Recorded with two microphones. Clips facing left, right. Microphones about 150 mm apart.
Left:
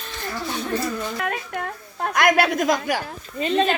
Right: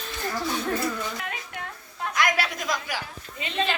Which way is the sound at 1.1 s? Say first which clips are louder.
Left 8 dB; 55° left (ahead or behind).